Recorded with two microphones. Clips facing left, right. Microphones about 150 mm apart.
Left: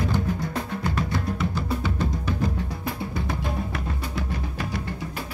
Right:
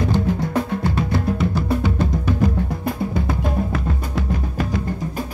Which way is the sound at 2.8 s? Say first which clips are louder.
Right 6 dB; 55° right (ahead or behind).